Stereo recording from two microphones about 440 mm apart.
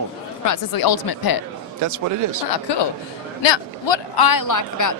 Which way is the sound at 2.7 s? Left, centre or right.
Left.